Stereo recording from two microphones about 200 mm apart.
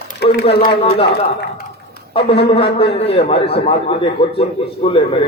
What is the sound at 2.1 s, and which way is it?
A man's voice, 30° left (ahead or behind).